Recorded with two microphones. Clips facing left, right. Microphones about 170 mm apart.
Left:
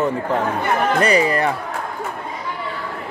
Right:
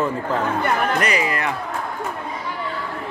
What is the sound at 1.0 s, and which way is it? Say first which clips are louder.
Speech: left 5 dB; 35° left (ahead or behind).